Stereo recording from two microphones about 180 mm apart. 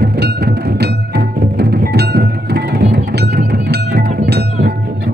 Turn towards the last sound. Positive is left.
turn(degrees=-65)  # may be behind; listen again after turning